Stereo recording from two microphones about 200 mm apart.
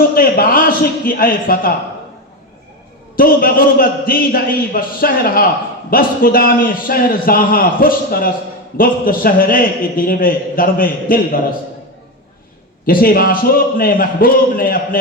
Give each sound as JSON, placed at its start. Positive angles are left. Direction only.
{"t": 0.1, "sound": "a man's voice", "side_deg": 45}
{"t": 3.2, "sound": "a man's voice", "side_deg": 45}
{"t": 12.8, "sound": "a man's voice", "side_deg": 45}